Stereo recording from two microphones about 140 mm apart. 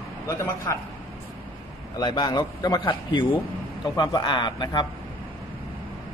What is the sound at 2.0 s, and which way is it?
Speech, 30° left (ahead or behind).